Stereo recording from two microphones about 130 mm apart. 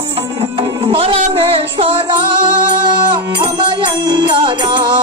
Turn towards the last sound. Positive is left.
turn(degrees=-35)  # may be behind; listen again after turning